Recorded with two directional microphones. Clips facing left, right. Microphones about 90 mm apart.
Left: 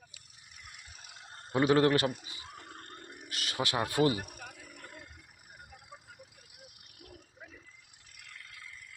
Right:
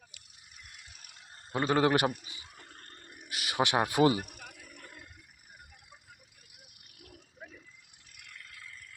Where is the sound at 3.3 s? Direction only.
10° right (ahead or behind).